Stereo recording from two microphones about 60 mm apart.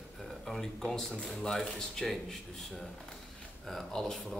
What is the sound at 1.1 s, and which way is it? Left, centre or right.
Speech, centre.